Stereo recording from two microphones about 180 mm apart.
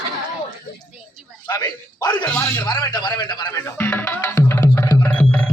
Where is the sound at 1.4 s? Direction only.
20° left (ahead or behind).